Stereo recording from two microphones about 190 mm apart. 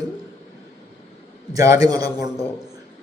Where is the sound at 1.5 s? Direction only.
15° right (ahead or behind).